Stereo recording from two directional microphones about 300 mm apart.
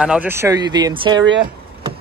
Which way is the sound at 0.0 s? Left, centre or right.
Centre.